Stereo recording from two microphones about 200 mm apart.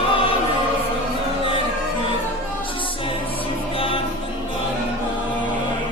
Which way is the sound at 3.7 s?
25° left (ahead or behind).